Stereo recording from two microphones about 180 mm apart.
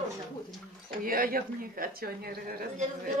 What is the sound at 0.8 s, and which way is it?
A woman's voice, 50° right (ahead or behind).